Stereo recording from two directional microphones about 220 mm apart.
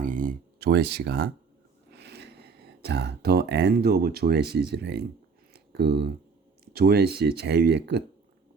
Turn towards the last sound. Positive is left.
turn(degrees=-50)  # may be behind; listen again after turning